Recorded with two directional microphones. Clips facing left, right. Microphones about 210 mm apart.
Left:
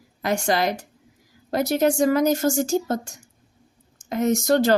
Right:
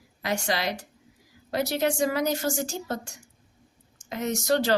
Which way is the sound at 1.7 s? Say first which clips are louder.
Left 7 dB; 45° left (ahead or behind).